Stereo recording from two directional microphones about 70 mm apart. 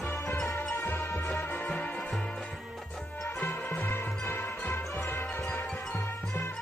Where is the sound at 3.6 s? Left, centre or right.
Left.